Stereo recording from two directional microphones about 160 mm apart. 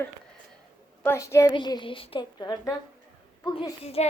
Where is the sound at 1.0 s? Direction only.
15° left (ahead or behind).